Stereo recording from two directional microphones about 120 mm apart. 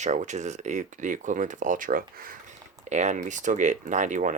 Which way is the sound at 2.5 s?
80° right.